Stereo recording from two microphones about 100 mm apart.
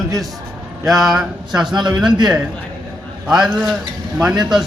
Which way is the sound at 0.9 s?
5° right (ahead or behind).